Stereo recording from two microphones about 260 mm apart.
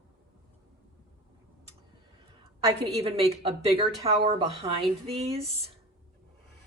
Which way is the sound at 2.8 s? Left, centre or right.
Right.